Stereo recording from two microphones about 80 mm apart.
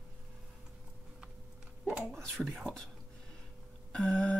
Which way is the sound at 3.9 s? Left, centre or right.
Centre.